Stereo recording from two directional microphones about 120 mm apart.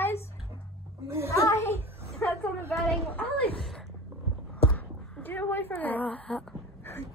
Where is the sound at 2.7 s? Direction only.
10° left (ahead or behind).